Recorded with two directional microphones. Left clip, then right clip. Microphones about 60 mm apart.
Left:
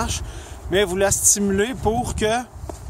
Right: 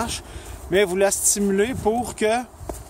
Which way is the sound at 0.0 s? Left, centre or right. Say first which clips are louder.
Left 1 dB; left.